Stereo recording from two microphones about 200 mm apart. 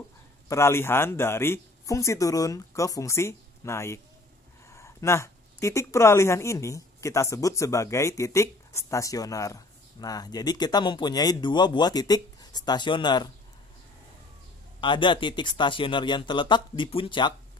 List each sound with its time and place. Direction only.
0.5 s speech: 15° left (ahead or behind)
14.8 s speech: 25° left (ahead or behind)